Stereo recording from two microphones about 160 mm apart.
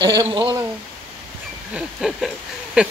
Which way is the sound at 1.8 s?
Centre (ahead or behind).